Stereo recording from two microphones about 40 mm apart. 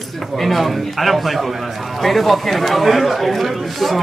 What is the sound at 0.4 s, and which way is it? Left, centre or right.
Speech, centre.